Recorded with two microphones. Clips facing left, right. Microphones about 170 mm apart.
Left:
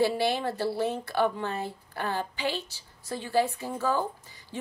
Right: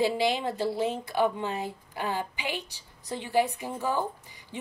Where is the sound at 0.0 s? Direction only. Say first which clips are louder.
Even; 15° right (ahead or behind).